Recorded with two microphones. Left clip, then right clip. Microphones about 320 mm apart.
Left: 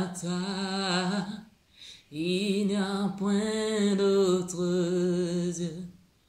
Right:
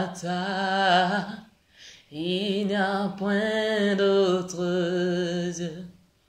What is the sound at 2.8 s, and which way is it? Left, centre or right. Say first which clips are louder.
Music: right 7 dB; right.